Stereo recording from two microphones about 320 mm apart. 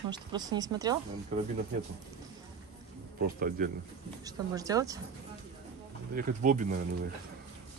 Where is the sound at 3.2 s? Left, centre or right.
Right.